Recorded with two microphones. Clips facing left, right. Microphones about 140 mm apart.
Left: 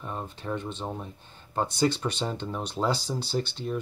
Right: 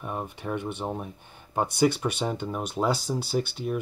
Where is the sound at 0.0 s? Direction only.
15° right (ahead or behind).